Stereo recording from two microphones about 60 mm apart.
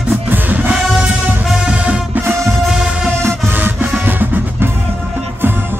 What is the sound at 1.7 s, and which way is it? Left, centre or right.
Music, right.